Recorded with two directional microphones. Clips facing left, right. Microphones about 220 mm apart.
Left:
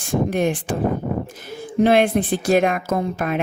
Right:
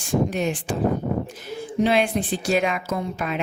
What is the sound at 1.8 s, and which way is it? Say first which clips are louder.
Speech: left 5 dB; 55° left (ahead or behind).